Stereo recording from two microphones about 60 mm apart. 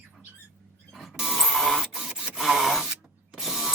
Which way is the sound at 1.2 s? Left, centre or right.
Centre.